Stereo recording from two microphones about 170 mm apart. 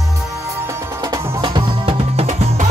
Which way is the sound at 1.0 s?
20° right (ahead or behind).